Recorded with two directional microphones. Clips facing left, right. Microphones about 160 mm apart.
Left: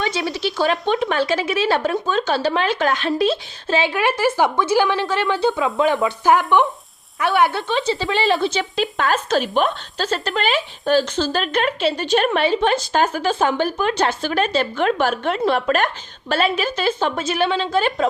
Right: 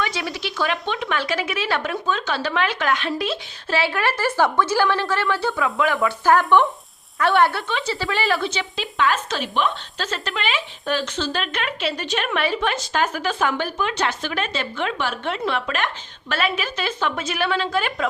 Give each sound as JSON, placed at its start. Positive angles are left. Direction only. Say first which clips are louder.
{"t": 0.0, "sound": "speech", "louder": "left 3 dB", "side_deg": 25}
{"t": 0.6, "sound": "speech", "louder": "left 5 dB", "side_deg": 45}
{"t": 1.1, "sound": "speech", "louder": "left 5 dB", "side_deg": 30}
{"t": 7.9, "sound": "speech", "louder": "left 3 dB", "side_deg": 20}
{"t": 8.4, "sound": "speech", "louder": "left 6 dB", "side_deg": 35}